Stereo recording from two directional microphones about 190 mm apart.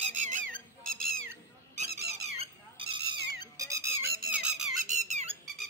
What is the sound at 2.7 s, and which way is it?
Cat, 25° right (ahead or behind).